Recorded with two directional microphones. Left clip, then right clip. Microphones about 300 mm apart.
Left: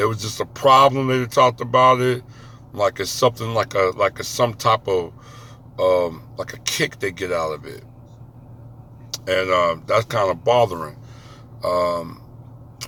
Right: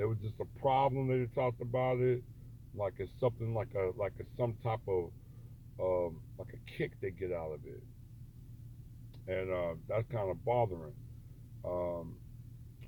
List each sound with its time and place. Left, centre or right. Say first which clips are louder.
0.0 s speech: left 16 dB; centre
9.2 s speech: left 18 dB; centre